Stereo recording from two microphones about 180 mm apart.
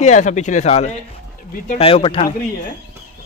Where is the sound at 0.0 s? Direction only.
40° left (ahead or behind).